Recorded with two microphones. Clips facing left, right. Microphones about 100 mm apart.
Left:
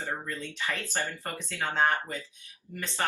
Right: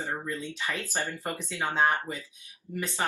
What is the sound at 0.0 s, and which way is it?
Speech, 15° right (ahead or behind).